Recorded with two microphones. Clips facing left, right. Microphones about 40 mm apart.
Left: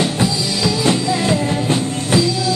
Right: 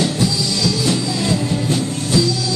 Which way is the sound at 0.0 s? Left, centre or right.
Left.